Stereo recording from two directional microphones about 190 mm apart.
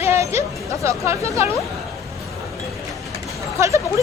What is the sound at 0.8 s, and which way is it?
Speech, 15° right (ahead or behind).